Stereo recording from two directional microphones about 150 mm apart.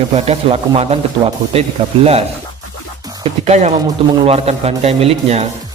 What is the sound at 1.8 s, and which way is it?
Speech, 35° right (ahead or behind).